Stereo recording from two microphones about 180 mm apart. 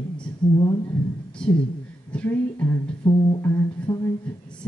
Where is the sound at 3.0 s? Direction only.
15° left (ahead or behind).